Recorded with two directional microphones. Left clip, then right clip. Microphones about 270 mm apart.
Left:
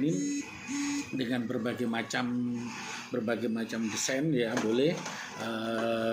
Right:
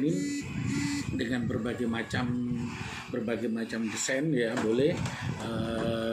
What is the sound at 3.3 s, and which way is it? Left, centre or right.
Speech, centre.